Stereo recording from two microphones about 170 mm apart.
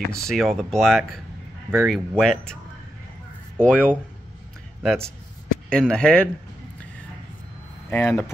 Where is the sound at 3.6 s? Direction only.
5° left (ahead or behind).